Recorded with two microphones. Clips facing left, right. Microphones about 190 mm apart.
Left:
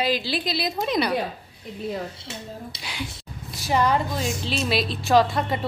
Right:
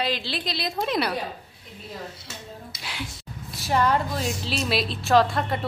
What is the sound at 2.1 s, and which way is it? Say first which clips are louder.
Dishes: left 4 dB; 25° left (ahead or behind).